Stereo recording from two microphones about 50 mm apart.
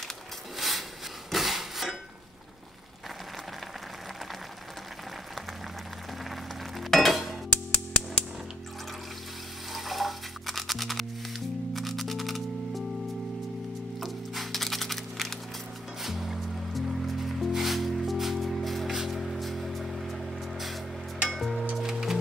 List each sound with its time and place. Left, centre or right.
0.6 s a sound: centre
1.3 s rub: centre
6.8 s a sound: centre
7.7 s music: left
9.7 s music: centre
13.9 s music: centre